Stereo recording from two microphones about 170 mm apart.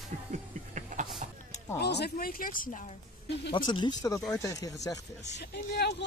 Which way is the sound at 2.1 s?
55° left (ahead or behind).